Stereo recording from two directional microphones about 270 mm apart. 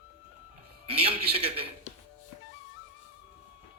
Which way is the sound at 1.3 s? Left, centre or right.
Right.